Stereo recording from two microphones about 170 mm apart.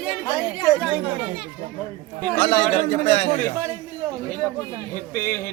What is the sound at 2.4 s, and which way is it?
Speech, 35° left (ahead or behind).